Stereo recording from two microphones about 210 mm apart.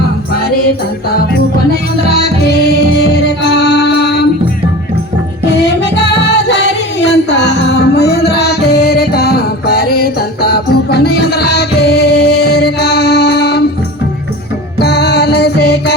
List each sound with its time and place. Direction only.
1.7 s music: 50° left (ahead or behind)
6.5 s music: 55° left (ahead or behind)
14.8 s music: 50° left (ahead or behind)